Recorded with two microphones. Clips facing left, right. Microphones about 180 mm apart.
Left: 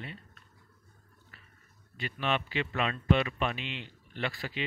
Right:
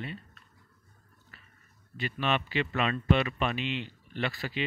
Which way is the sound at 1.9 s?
80° right.